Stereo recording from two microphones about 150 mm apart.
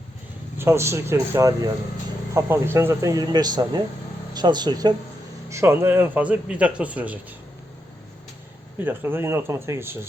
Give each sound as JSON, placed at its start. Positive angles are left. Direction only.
{"t": 0.6, "sound": "a man's voice", "side_deg": -20}
{"t": 5.5, "sound": "a man's voice", "side_deg": -15}
{"t": 8.8, "sound": "a man's voice", "side_deg": -15}